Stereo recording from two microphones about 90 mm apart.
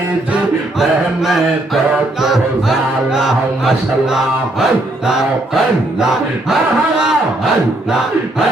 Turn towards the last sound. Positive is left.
turn(degrees=-5)  # may be behind; listen again after turning